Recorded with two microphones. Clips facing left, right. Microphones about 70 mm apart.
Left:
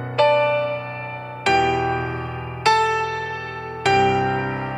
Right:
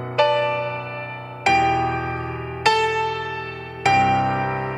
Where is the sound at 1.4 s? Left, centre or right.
Right.